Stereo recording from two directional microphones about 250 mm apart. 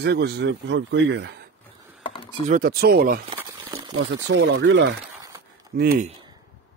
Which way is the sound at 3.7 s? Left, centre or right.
Centre.